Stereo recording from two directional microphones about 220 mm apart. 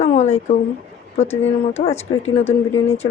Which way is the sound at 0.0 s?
30° left (ahead or behind).